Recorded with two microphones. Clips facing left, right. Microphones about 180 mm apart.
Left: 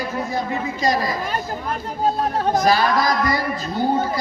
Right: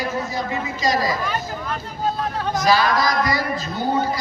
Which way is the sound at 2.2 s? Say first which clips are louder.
Left 4 dB; 45° left (ahead or behind).